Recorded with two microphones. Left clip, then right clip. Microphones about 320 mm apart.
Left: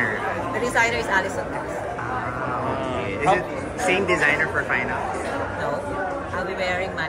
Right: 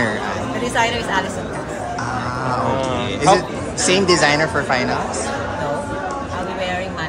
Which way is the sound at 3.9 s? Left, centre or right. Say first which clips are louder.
Right 7 dB; centre.